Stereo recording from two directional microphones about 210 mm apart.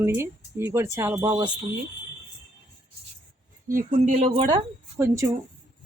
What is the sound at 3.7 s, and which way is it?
Speech, 40° right (ahead or behind).